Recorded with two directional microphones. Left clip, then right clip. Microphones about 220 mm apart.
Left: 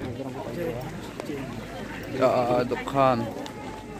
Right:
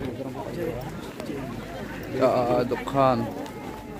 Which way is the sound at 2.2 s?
Centre (ahead or behind).